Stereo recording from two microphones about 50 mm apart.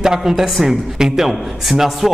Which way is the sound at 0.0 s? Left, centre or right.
Centre.